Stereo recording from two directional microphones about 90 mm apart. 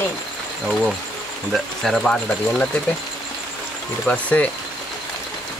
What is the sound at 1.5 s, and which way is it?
Speech, 5° left (ahead or behind).